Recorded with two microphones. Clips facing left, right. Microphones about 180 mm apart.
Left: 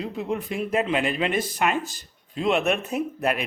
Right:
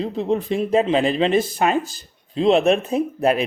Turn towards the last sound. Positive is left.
turn(degrees=-30)  # may be behind; listen again after turning